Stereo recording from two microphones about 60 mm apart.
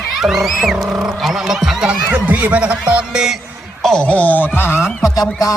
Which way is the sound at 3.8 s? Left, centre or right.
Centre.